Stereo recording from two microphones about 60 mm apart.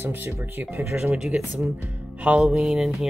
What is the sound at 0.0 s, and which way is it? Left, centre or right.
Speech, right.